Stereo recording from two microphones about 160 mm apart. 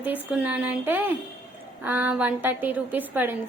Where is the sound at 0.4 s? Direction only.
10° right (ahead or behind).